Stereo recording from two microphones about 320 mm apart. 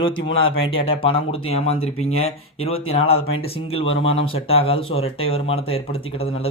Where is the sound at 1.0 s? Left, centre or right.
Centre.